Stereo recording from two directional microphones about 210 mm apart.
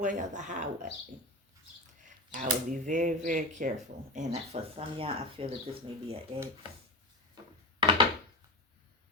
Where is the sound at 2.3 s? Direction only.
35° right (ahead or behind).